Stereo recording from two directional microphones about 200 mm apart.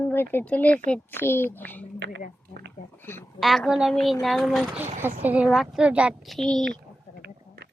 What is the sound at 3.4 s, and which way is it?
A woman's voice, centre (ahead or behind).